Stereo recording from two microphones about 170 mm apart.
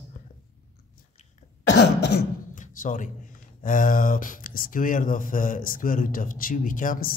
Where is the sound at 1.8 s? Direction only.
75° left (ahead or behind).